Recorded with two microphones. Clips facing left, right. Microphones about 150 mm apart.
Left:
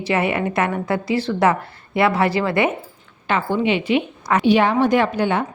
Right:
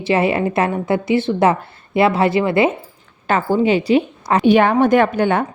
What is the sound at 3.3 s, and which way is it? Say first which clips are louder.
A woman's voice: right 4 dB; 40° right (ahead or behind).